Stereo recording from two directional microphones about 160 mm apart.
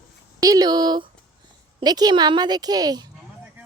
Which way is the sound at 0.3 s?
20° right (ahead or behind).